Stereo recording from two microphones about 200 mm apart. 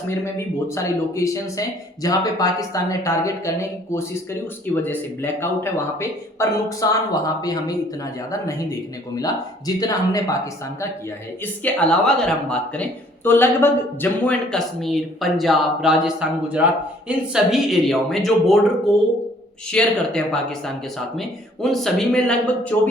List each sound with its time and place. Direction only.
0.1 s speech: 15° left (ahead or behind)
9.1 s speech: 20° left (ahead or behind)
11.6 s speech: 5° left (ahead or behind)
19.7 s speech: 5° left (ahead or behind)